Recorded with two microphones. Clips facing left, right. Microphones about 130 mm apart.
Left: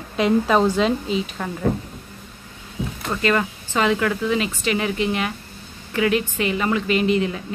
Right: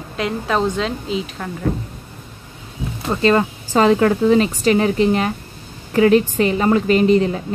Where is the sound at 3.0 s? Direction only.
30° right (ahead or behind).